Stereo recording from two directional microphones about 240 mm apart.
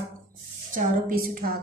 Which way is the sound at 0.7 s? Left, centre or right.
Right.